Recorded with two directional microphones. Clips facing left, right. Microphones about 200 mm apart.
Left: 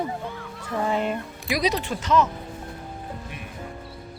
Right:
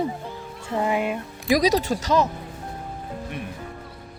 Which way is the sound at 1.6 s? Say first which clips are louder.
Right 1 dB; 40° right (ahead or behind).